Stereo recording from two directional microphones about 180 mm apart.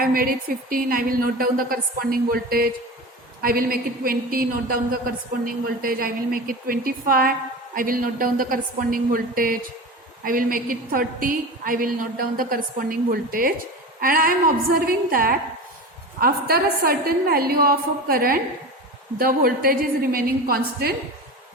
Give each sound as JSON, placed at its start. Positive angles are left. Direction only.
{"t": 0.0, "sound": "a woman's voice", "side_deg": -50}